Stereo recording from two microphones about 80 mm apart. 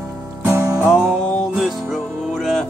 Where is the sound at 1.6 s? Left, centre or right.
Centre.